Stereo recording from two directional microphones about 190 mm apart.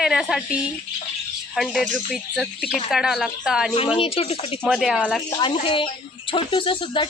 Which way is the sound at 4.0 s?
30° left (ahead or behind).